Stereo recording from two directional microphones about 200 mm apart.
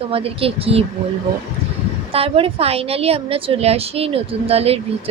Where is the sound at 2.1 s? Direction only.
30° right (ahead or behind).